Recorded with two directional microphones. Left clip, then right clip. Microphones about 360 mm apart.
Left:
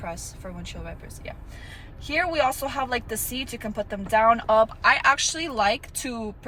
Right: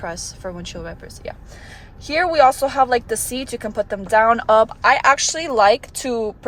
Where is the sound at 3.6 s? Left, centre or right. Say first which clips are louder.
Right 7 dB; right.